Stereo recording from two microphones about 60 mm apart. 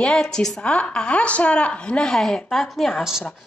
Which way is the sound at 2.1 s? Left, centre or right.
Centre.